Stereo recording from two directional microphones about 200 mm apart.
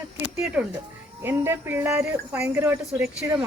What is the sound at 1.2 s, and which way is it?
A woman's voice, 10° right (ahead or behind).